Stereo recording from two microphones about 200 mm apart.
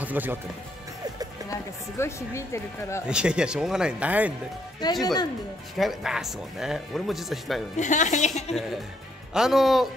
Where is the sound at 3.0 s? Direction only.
5° right (ahead or behind).